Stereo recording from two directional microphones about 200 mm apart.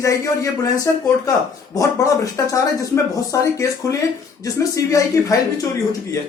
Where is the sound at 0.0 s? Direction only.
15° left (ahead or behind).